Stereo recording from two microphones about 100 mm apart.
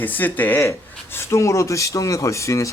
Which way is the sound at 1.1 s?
30° left (ahead or behind).